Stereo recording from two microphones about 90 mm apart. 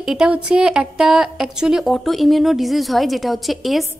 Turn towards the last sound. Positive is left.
turn(degrees=0)  # may be behind; listen again after turning